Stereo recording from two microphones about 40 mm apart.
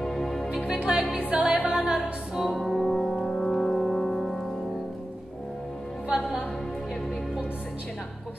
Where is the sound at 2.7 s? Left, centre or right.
Centre.